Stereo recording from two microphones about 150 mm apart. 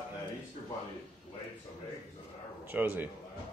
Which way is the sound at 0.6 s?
45° left (ahead or behind).